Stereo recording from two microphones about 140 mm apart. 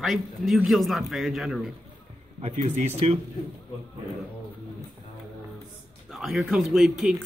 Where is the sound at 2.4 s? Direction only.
50° right (ahead or behind).